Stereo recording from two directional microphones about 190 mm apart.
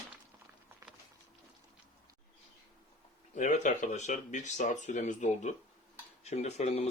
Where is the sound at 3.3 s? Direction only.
40° left (ahead or behind).